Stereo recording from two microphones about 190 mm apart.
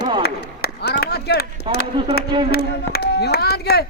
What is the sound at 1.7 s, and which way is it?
Speech, 25° right (ahead or behind).